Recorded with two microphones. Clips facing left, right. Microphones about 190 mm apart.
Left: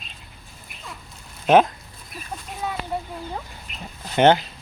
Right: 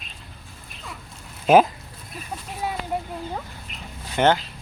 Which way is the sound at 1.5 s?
5° right (ahead or behind).